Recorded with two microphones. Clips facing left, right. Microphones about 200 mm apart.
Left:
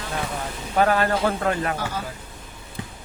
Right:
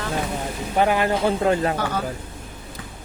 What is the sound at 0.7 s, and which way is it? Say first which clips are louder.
Speech: even; 15° right (ahead or behind).